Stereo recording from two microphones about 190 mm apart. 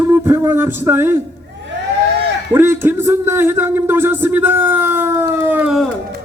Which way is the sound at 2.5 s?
10° right (ahead or behind).